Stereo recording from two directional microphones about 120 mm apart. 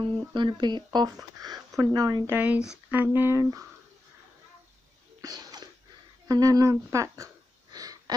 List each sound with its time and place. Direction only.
0.0 s speech: 40° right (ahead or behind)
2.3 s speech: 15° right (ahead or behind)
5.2 s sneeze: 35° right (ahead or behind)
6.2 s speech: 30° right (ahead or behind)
7.7 s a sound: 30° right (ahead or behind)